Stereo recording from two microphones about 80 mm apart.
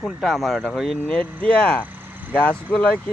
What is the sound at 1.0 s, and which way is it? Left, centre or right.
Speech, centre.